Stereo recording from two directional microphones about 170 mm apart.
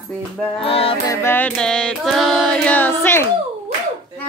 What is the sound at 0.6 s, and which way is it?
Music, 35° left (ahead or behind).